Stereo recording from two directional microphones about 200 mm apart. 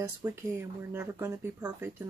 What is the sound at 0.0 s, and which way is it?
Speech, 10° right (ahead or behind).